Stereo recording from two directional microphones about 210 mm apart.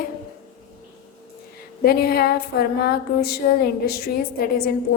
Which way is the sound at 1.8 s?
45° left (ahead or behind).